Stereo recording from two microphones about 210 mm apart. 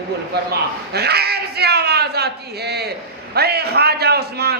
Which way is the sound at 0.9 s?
50° right (ahead or behind).